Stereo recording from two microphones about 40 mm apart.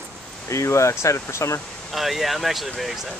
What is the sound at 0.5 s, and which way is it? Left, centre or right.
Speech, left.